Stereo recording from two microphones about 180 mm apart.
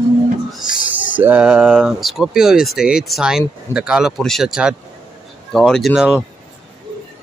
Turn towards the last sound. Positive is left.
turn(degrees=-5)  # may be behind; listen again after turning